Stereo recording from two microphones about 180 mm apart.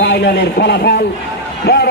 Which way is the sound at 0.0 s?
70° left (ahead or behind).